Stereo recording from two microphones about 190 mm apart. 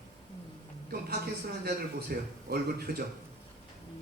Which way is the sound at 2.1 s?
50° right (ahead or behind).